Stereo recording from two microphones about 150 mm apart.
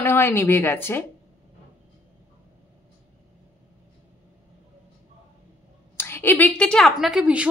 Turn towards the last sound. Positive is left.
turn(degrees=-10)  # may be behind; listen again after turning